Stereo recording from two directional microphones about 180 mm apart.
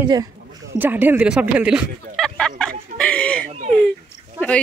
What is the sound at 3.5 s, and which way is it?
Speech, 40° right (ahead or behind).